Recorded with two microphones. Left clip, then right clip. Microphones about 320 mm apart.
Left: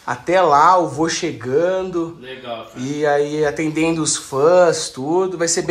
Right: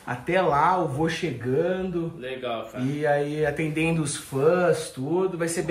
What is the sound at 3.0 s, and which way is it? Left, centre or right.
Speech, centre.